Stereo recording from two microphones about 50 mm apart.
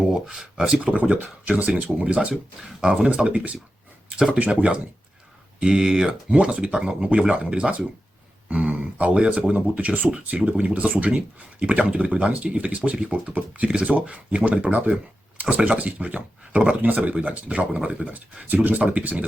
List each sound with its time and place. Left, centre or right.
0.7 s speech: right
2.3 s speech: centre
3.2 s speech: right
5.5 s speech: centre
9.6 s speech: right